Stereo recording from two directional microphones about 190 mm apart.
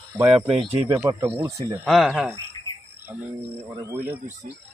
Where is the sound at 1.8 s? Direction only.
Centre (ahead or behind).